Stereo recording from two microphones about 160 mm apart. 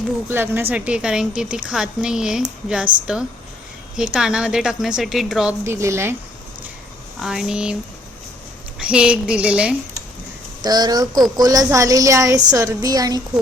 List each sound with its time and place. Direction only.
0.3 s a woman's voice: 15° right (ahead or behind)
5.6 s a woman's voice: 15° right (ahead or behind)
7.2 s a woman's voice: 5° right (ahead or behind)
8.8 s a woman's voice: 5° right (ahead or behind)
10.6 s a woman's voice: 25° right (ahead or behind)